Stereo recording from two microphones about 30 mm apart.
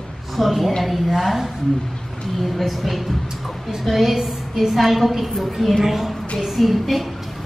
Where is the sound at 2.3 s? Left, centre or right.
Centre.